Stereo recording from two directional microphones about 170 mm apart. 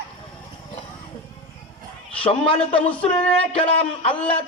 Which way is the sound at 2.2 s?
30° left (ahead or behind).